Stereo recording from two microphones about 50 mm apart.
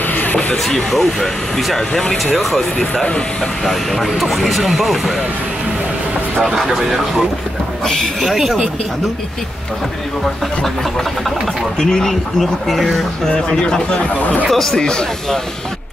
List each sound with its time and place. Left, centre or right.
0.0 s a sound: left
0.7 s speech: centre
6.4 s speech: centre
7.8 s speech: centre
8.3 s speech: centre
11.8 s speech: centre
13.2 s speech: centre
14.5 s speech: centre